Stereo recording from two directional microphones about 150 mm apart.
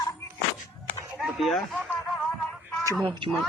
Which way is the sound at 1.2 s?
Centre (ahead or behind).